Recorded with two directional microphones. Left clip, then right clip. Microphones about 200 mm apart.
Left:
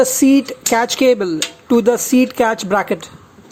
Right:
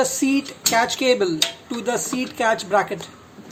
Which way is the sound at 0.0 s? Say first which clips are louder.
Left 8 dB; 35° left (ahead or behind).